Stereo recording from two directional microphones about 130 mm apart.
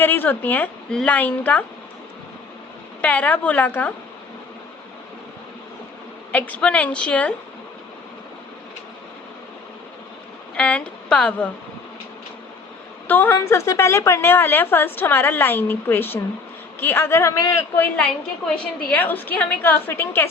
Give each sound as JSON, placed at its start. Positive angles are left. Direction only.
{"t": 0.0, "sound": "a woman's voice", "side_deg": 15}
{"t": 3.0, "sound": "a woman's voice", "side_deg": 10}
{"t": 6.3, "sound": "a woman's voice", "side_deg": 10}
{"t": 10.5, "sound": "a woman's voice", "side_deg": 10}
{"t": 13.1, "sound": "a woman's voice", "side_deg": 15}
{"t": 17.7, "sound": "a woman's voice", "side_deg": 10}